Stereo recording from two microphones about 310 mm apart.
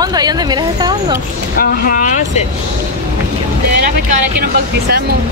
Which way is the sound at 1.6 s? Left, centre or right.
Left.